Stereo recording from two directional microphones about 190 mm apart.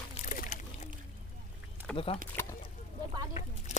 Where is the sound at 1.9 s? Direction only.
30° left (ahead or behind).